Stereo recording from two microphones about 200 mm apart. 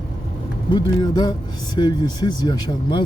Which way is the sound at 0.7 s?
20° left (ahead or behind).